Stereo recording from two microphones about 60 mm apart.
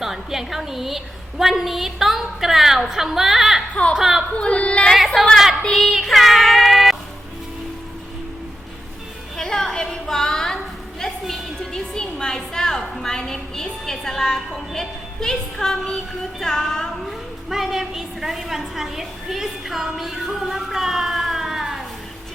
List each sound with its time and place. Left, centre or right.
0.0 s a woman's voice: centre
4.4 s child singing: centre
4.9 s a woman's voice: centre
5.7 s child singing: centre
9.4 s a sound: centre
16.4 s child singing: centre
17.5 s a woman's voice: centre